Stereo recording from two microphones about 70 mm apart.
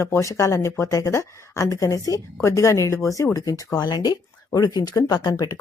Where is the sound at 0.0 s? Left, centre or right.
Left.